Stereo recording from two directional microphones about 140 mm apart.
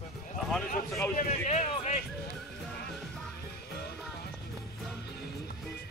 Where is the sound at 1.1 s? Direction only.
55° left (ahead or behind).